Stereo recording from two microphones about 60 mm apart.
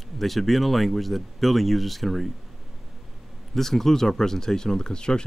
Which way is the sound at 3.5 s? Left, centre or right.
Centre.